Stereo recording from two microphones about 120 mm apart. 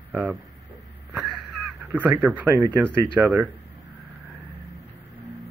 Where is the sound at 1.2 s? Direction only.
15° right (ahead or behind).